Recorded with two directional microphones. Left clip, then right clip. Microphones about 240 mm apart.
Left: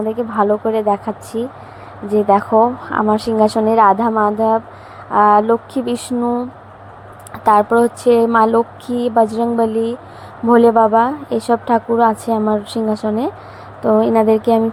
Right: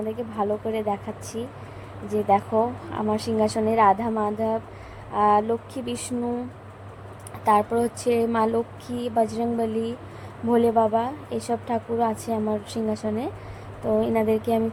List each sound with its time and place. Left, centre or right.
0.1 s a woman's voice: centre
7.4 s a woman's voice: centre